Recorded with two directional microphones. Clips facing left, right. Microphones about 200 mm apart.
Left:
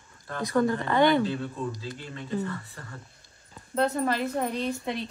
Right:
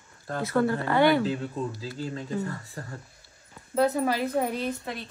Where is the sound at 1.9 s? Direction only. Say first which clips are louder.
Right 4 dB; 40° right (ahead or behind).